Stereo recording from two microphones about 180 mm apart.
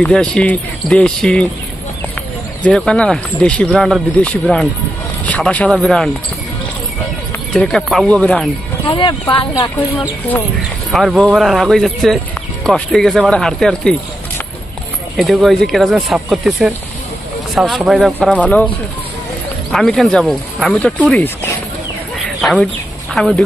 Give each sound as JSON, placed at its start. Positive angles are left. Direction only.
{"t": 0.0, "sound": "speech", "side_deg": 5}
{"t": 2.6, "sound": "speech", "side_deg": 5}
{"t": 7.5, "sound": "speech", "side_deg": 0}
{"t": 8.8, "sound": "speech", "side_deg": 25}
{"t": 10.9, "sound": "speech", "side_deg": 0}
{"t": 15.1, "sound": "speech", "side_deg": 0}
{"t": 19.7, "sound": "speech", "side_deg": 0}